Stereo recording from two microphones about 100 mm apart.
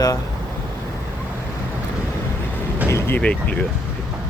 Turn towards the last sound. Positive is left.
turn(degrees=10)  # may be behind; listen again after turning